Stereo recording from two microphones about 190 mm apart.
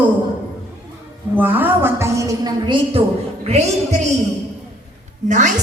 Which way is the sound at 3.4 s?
35° right (ahead or behind).